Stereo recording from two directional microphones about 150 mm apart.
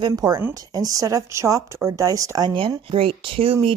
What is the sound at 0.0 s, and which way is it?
Speech, 25° right (ahead or behind).